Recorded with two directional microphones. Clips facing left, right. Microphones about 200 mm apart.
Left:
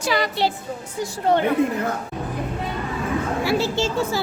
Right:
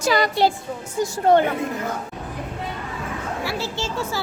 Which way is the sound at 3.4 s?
15° left (ahead or behind).